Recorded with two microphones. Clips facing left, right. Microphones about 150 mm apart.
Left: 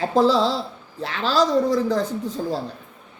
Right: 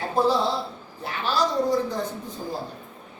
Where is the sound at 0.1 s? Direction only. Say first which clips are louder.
Left 3 dB; 90° left.